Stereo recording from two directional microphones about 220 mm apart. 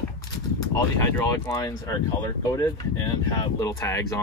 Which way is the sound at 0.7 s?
15° left (ahead or behind).